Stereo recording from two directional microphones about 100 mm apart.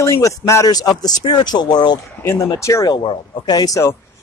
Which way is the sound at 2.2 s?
25° left (ahead or behind).